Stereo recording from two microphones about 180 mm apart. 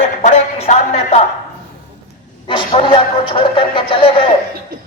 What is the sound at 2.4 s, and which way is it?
A man's voice, 30° left (ahead or behind).